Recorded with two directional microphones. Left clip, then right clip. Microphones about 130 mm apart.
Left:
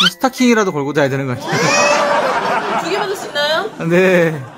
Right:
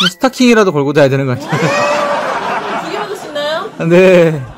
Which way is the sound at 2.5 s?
15° left (ahead or behind).